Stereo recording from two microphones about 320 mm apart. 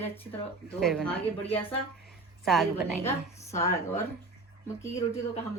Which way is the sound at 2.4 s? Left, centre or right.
Centre.